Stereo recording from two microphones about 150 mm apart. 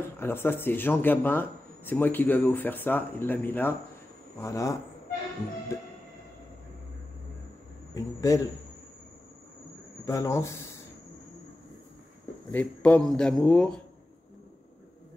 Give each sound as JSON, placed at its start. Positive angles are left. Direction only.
{"t": 0.2, "sound": "speech", "side_deg": 15}
{"t": 7.9, "sound": "speech", "side_deg": 20}
{"t": 10.0, "sound": "speech", "side_deg": 20}
{"t": 12.4, "sound": "a man's voice", "side_deg": 10}